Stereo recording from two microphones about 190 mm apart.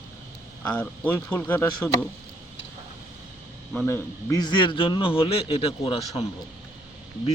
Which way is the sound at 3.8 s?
15° left (ahead or behind).